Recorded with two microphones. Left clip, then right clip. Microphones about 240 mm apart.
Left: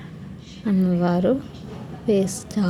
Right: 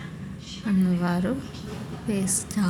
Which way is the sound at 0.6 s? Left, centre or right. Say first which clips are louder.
Left 5 dB; centre.